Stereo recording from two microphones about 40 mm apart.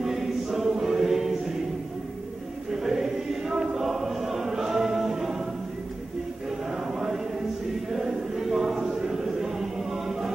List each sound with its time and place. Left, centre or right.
0.0 s choir: centre
2.7 s choir: centre
6.7 s chant: centre
7.9 s a sound: centre